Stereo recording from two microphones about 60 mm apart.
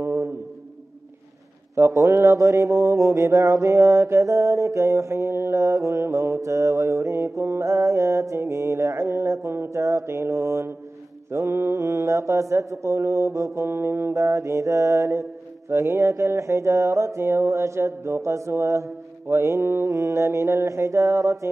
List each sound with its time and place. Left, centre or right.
0.0 s a sound: right
1.8 s mantra: right
5.6 s mantra: right
14.1 s mantra: right
19.9 s mantra: right